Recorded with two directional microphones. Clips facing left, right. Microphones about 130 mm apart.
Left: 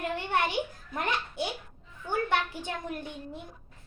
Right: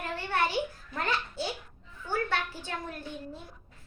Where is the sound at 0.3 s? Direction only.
20° left (ahead or behind).